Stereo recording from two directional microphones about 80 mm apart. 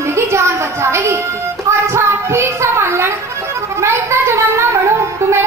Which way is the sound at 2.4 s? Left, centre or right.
Right.